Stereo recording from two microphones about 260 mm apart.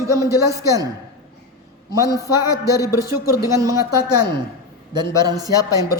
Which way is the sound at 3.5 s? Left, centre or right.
Centre.